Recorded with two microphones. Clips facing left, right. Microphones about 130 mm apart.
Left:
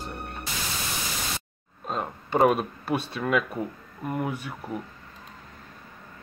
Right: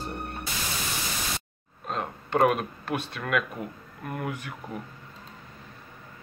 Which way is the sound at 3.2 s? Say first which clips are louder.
Left 3 dB; 20° left (ahead or behind).